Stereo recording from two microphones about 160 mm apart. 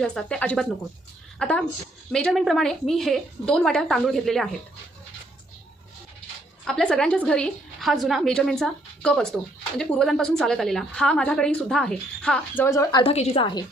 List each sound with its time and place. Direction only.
0.0 s a woman's voice: 5° left (ahead or behind)
6.7 s a woman's voice: 5° left (ahead or behind)
12.6 s a woman's voice: 20° left (ahead or behind)
13.0 s a woman's voice: 40° left (ahead or behind)